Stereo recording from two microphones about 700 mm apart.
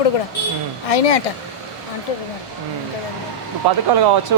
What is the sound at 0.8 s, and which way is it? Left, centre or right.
Speech, left.